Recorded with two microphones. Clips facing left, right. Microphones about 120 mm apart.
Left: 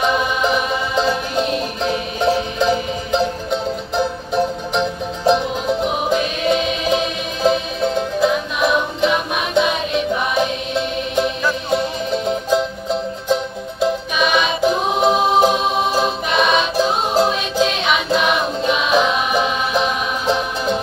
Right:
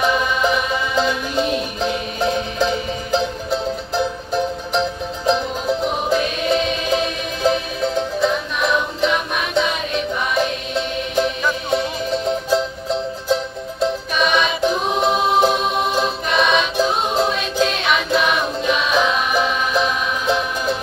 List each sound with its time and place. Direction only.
1.3 s music: centre (ahead or behind)